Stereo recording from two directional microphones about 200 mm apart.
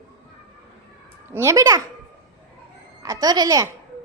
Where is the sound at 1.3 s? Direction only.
15° right (ahead or behind).